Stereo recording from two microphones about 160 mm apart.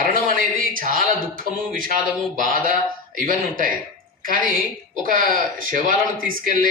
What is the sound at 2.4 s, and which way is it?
A woman's voice, 60° right (ahead or behind).